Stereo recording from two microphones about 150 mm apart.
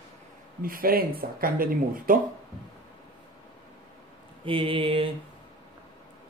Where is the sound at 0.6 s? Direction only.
75° right (ahead or behind).